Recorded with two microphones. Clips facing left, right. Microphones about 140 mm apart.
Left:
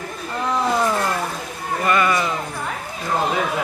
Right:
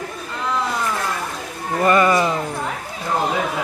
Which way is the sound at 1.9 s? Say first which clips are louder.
Right 4 dB; 30° right (ahead or behind).